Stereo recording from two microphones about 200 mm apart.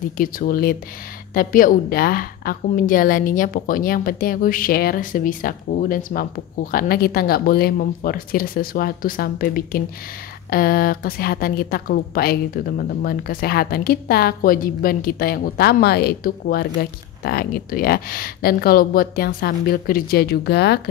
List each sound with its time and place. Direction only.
0.2 s a woman's voice: 45° left (ahead or behind)